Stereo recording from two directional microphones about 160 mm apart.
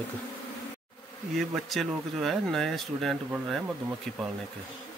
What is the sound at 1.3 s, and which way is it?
Speech, centre (ahead or behind).